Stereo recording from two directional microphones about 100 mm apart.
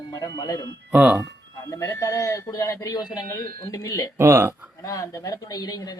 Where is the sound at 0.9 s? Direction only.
15° right (ahead or behind).